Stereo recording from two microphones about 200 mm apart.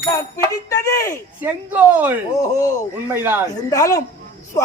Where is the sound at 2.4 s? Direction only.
15° left (ahead or behind).